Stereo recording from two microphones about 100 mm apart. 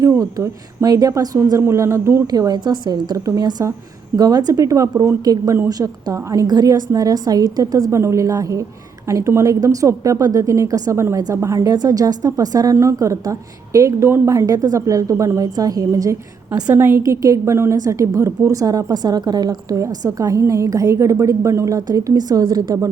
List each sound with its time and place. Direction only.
0.2 s a woman's voice: 35° right (ahead or behind)
2.2 s a woman's voice: 40° right (ahead or behind)
16.6 s a woman's voice: 25° right (ahead or behind)